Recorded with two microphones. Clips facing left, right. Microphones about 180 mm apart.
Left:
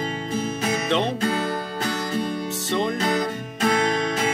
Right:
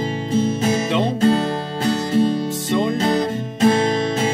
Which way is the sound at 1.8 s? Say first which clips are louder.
Right 10 dB; 25° right (ahead or behind).